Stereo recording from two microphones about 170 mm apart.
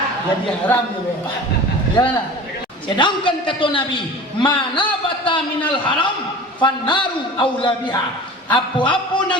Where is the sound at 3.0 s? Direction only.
30° left (ahead or behind).